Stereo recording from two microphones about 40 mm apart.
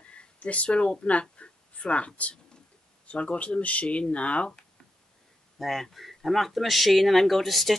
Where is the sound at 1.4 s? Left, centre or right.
Left.